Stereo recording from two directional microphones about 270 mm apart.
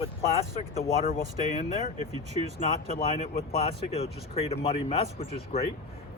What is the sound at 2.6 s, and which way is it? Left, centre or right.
Speech, left.